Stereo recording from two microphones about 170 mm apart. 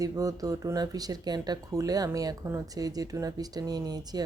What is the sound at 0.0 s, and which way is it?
Speech, 20° right (ahead or behind).